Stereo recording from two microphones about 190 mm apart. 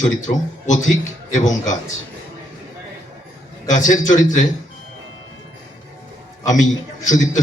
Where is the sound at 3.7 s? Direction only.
40° left (ahead or behind).